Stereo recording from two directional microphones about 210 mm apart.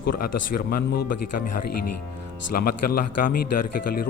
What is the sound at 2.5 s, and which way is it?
Speech, 45° left (ahead or behind).